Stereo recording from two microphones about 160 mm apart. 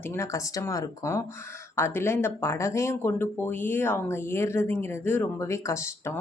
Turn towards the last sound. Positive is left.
turn(degrees=20)  # may be behind; listen again after turning